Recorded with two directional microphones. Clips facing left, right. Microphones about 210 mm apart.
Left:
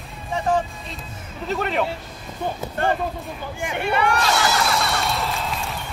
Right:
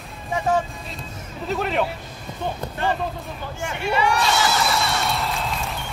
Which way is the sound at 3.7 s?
55° left (ahead or behind).